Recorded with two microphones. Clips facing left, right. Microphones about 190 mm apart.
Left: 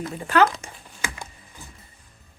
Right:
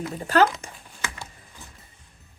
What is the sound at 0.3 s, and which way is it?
Speech, 40° right (ahead or behind).